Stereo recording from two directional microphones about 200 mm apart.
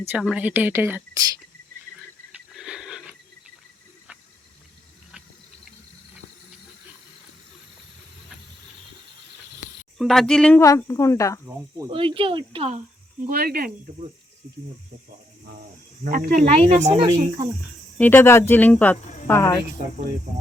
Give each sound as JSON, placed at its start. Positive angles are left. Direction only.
{"t": 0.1, "sound": "speech", "side_deg": -5}
{"t": 2.5, "sound": "a sound", "side_deg": -5}
{"t": 10.0, "sound": "speech", "side_deg": 0}
{"t": 11.4, "sound": "speech", "side_deg": -10}
{"t": 11.9, "sound": "speech", "side_deg": -25}
{"t": 13.2, "sound": "speech", "side_deg": -50}
{"t": 16.0, "sound": "speech", "side_deg": -45}
{"t": 16.6, "sound": "speech", "side_deg": -35}
{"t": 17.9, "sound": "speech", "side_deg": 10}